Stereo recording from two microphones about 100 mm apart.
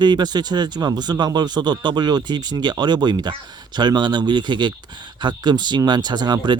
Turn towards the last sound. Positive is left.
turn(degrees=-45)  # may be behind; listen again after turning